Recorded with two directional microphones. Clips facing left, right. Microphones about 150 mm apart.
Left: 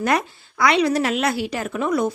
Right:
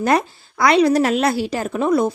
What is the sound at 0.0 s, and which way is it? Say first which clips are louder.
A woman's voice: right 3 dB; 30° right (ahead or behind).